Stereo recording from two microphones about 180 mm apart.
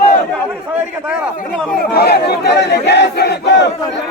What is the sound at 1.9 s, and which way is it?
Speech, 60° left (ahead or behind).